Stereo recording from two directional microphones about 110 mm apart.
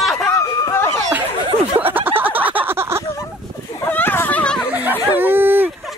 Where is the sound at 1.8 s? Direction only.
15° right (ahead or behind).